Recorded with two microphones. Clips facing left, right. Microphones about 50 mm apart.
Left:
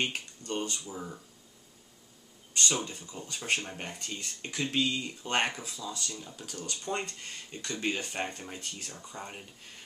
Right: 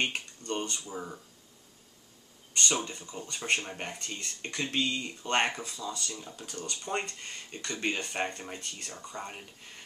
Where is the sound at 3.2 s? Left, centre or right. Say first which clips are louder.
Right 1 dB; centre.